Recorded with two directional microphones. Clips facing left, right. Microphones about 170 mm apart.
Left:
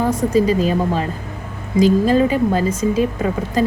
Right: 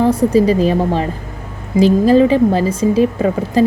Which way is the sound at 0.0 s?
30° right (ahead or behind).